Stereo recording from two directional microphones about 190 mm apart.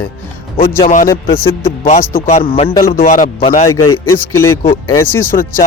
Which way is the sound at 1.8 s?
40° left (ahead or behind).